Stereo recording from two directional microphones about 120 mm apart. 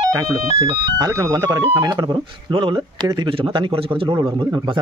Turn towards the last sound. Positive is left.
turn(degrees=-45)  # may be behind; listen again after turning